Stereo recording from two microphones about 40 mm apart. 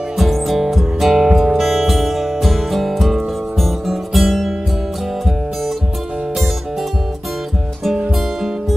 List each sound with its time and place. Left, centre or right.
0.2 s music: centre